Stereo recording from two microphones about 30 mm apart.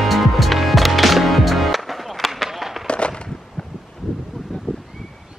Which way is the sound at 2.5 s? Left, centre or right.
Centre.